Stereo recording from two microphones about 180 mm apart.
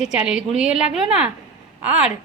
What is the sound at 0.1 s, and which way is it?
A woman's voice, 5° right (ahead or behind).